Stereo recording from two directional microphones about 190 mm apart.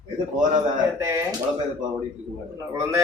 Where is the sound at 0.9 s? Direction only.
15° right (ahead or behind).